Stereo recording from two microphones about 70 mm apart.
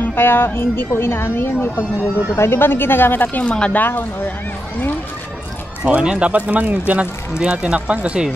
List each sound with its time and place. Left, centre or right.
0.0 s speech: left
3.4 s speech: centre
5.9 s speech: centre